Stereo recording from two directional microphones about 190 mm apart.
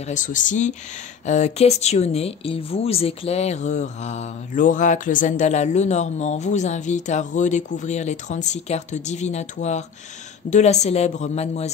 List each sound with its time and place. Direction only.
0.0 s speech: 40° left (ahead or behind)